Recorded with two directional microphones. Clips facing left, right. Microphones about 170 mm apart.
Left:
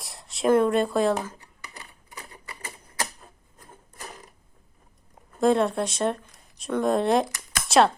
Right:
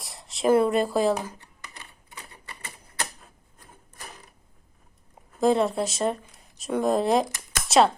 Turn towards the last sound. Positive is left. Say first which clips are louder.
# even
turn(degrees=0)  # may be behind; listen again after turning